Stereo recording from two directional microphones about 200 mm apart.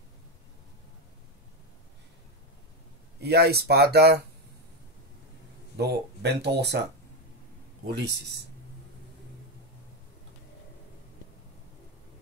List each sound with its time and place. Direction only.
3.2 s speech: 55° right (ahead or behind)
5.8 s speech: 55° right (ahead or behind)
8.0 s speech: 60° right (ahead or behind)